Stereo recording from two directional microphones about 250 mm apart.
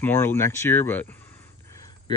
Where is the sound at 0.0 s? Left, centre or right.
Centre.